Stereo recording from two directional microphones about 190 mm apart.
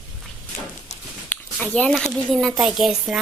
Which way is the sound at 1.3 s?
5° left (ahead or behind).